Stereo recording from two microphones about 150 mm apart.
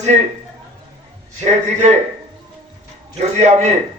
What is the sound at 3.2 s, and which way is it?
Speech, 45° right (ahead or behind).